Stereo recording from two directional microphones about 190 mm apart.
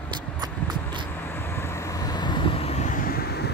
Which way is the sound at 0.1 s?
25° right (ahead or behind).